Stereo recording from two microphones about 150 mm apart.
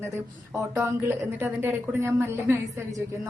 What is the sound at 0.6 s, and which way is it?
A woman's voice, 15° right (ahead or behind).